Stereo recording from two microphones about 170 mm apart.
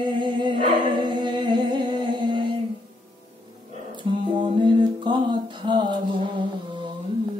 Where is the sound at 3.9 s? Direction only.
30° right (ahead or behind).